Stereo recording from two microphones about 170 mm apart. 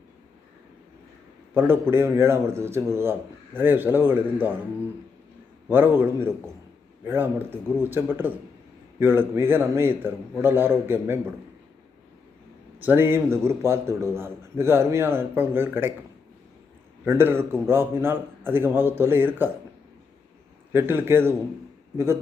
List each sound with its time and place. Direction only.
1.5 s a man's voice: 10° right (ahead or behind)
5.7 s a man's voice: 10° right (ahead or behind)
12.8 s a man's voice: 10° right (ahead or behind)
17.1 s a man's voice: 15° right (ahead or behind)
20.7 s a man's voice: 15° right (ahead or behind)